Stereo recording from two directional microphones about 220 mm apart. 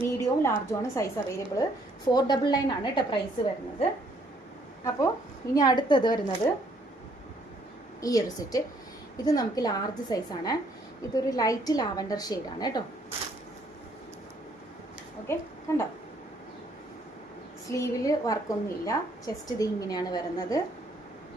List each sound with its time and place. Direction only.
0.0 s a woman's voice: 10° left (ahead or behind)
4.8 s a woman's voice: 15° left (ahead or behind)
8.0 s a woman's voice: 15° left (ahead or behind)
15.3 s a woman's voice: 10° left (ahead or behind)
17.7 s a woman's voice: 15° left (ahead or behind)